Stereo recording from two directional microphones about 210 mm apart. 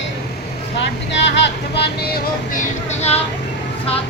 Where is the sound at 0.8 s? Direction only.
55° left (ahead or behind).